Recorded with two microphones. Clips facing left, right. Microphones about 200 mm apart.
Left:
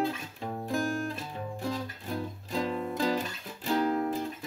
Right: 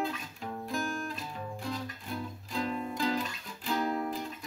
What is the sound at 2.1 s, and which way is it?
Music, 40° left (ahead or behind).